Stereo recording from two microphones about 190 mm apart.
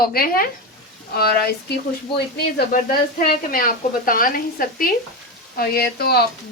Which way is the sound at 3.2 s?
50° left (ahead or behind).